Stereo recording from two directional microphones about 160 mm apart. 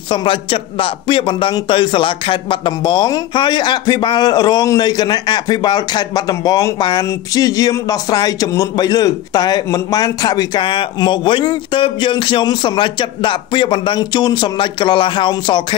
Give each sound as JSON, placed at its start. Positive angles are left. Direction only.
{"t": 0.1, "sound": "a man's voice", "side_deg": 30}